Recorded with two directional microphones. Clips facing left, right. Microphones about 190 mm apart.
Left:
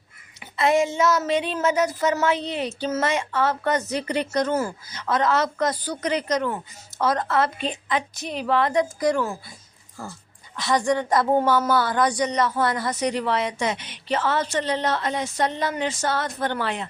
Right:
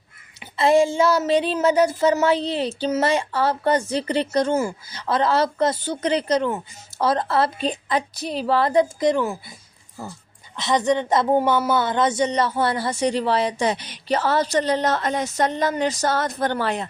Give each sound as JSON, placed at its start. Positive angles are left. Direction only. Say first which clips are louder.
{"t": 0.5, "sound": "a woman's voice", "louder": "right 4 dB", "side_deg": -30}
{"t": 10.6, "sound": "a woman's voice", "louder": "right 2 dB", "side_deg": -20}